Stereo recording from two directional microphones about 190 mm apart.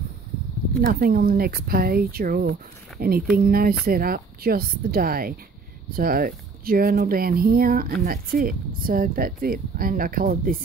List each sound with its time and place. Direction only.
0.7 s speech: 50° right (ahead or behind)